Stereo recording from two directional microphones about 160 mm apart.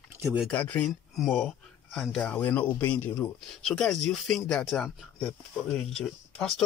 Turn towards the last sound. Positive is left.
turn(degrees=5)  # may be behind; listen again after turning